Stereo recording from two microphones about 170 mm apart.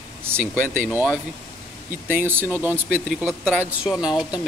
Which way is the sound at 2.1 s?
10° right (ahead or behind).